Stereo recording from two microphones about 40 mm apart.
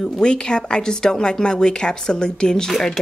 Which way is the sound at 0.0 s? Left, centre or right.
Left.